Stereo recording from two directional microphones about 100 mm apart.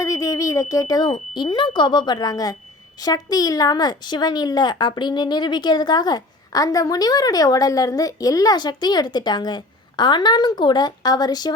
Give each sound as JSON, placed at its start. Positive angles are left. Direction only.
{"t": 0.0, "sound": "smoke detector", "side_deg": 35}
{"t": 1.4, "sound": "a woman's voice", "side_deg": 50}